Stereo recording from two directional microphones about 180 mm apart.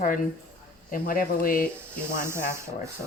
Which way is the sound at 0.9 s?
50° left (ahead or behind).